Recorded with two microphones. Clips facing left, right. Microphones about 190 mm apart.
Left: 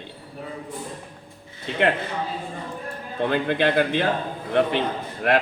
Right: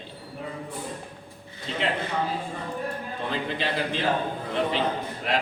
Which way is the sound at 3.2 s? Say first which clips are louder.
Left 8 dB; 60° left (ahead or behind).